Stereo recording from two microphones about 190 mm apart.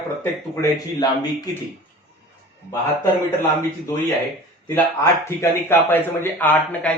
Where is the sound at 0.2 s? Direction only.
20° left (ahead or behind).